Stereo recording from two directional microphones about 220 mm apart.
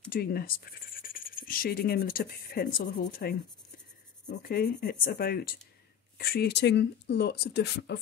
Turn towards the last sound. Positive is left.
turn(degrees=50)  # may be behind; listen again after turning